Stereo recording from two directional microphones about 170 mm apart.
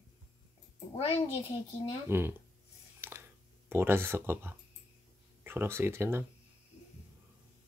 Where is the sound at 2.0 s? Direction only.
15° right (ahead or behind).